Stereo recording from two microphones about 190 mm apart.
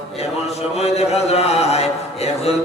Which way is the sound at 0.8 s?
35° left (ahead or behind).